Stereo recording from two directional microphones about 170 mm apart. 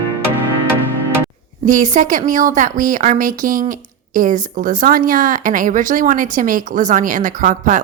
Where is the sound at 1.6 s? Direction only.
45° right (ahead or behind).